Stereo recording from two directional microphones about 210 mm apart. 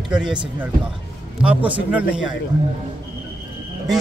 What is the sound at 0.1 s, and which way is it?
Speech, 5° right (ahead or behind).